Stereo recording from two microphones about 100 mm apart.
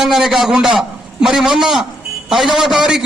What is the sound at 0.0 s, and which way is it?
A man's voice, 5° right (ahead or behind).